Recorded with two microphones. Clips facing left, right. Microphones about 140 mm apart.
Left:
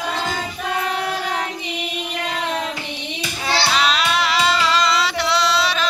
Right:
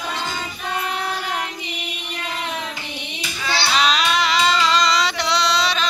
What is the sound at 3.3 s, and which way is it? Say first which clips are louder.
Child singing: left 2 dB; 35° left (ahead or behind).